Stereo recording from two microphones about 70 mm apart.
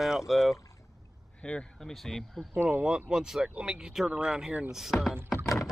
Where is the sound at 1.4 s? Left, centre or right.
Centre.